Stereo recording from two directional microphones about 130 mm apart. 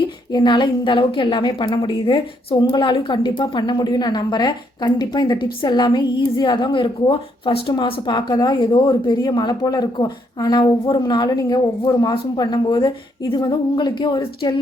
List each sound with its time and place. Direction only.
0.3 s a woman's voice: 35° left (ahead or behind)